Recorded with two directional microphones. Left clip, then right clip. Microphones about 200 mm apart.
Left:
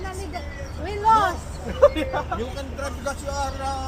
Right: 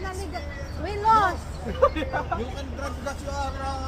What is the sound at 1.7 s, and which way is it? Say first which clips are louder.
Speech: left 1 dB; centre (ahead or behind).